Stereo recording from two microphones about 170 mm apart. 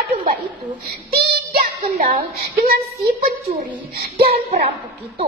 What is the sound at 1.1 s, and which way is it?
Child singing, 65° right (ahead or behind).